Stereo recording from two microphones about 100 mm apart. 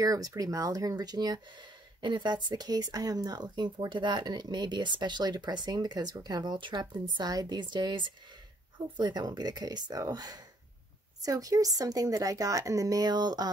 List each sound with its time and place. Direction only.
0.0 s speech: 35° right (ahead or behind)